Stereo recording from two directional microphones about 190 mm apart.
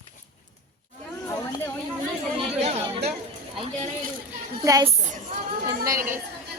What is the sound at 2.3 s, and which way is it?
Speech, 30° right (ahead or behind).